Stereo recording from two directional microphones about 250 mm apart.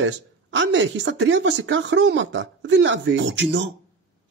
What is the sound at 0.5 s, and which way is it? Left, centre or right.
Speech, right.